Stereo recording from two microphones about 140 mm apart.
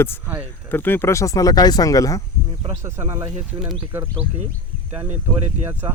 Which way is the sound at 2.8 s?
20° right (ahead or behind).